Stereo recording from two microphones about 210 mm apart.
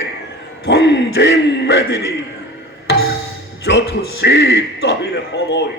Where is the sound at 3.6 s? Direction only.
50° left (ahead or behind).